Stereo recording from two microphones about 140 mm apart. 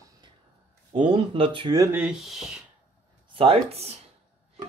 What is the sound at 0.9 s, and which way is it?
Speech, 40° right (ahead or behind).